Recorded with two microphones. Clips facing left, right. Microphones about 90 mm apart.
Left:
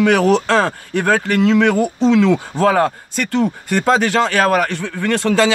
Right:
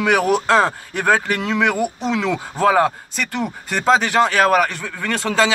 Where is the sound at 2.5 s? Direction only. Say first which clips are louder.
Right 4 dB; 20° right (ahead or behind).